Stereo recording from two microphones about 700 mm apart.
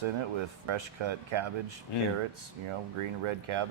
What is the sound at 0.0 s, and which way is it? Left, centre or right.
Speech, right.